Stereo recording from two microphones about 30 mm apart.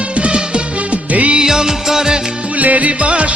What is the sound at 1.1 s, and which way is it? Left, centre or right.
Music, right.